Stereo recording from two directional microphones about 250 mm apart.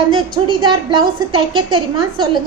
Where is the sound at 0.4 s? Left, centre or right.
Centre.